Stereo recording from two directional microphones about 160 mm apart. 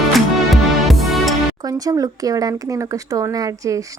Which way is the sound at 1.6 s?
25° right (ahead or behind).